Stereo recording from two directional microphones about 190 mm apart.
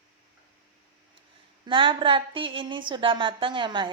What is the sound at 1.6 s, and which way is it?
A woman's voice, 25° right (ahead or behind).